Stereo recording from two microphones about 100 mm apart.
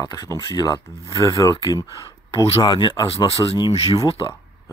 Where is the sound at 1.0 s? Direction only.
35° left (ahead or behind).